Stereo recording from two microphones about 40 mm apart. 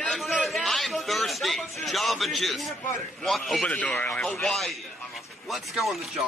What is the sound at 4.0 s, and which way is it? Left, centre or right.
Speech, left.